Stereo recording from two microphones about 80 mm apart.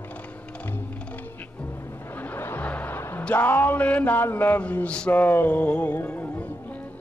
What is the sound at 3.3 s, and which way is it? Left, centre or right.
Speech, left.